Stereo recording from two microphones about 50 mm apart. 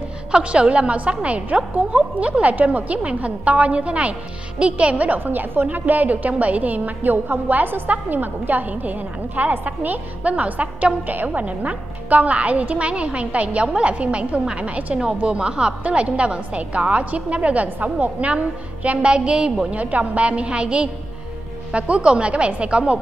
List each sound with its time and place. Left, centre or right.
0.3 s a woman's voice: right